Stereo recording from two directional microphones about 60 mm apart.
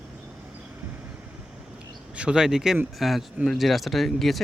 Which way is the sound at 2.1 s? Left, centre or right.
Centre.